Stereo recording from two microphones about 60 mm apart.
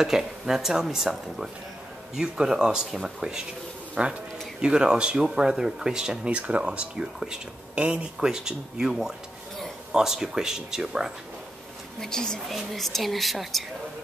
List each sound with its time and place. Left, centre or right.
0.0 s speech: centre
12.0 s a woman's voice: centre